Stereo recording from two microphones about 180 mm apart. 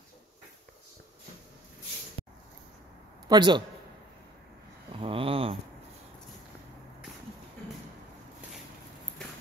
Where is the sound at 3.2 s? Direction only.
25° right (ahead or behind).